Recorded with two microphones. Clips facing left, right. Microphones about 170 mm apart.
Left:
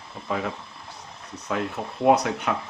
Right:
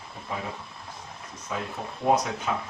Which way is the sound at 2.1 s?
70° left (ahead or behind).